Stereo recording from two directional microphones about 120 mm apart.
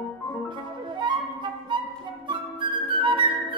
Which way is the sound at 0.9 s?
40° right (ahead or behind).